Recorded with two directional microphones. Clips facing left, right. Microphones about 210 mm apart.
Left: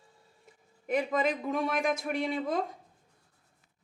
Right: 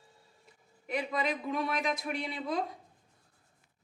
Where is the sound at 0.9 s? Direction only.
50° left (ahead or behind).